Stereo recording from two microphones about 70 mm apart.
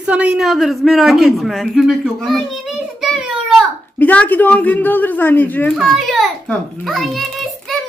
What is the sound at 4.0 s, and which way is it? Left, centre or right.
Speech, left.